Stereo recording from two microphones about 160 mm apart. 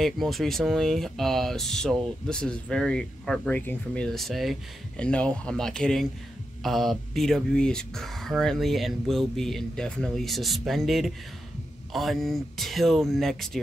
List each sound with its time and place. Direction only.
0.0 s speech: centre (ahead or behind)